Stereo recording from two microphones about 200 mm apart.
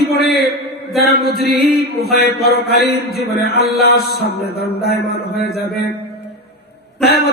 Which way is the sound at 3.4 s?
55° left (ahead or behind).